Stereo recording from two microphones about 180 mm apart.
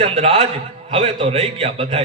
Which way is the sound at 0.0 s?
35° right (ahead or behind).